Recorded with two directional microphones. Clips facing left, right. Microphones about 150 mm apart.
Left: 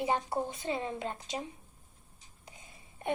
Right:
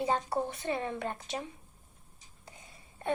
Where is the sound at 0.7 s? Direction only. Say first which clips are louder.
Right 1 dB; 20° left (ahead or behind).